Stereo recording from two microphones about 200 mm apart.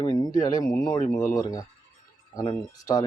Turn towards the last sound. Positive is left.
turn(degrees=15)  # may be behind; listen again after turning